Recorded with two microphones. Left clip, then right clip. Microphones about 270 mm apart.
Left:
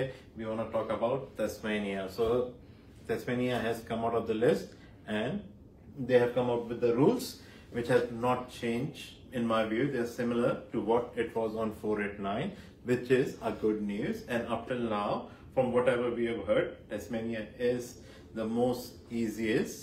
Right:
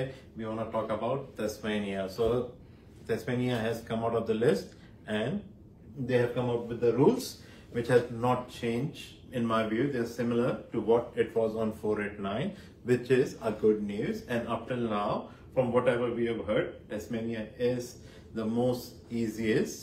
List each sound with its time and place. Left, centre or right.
0.1 s speech: centre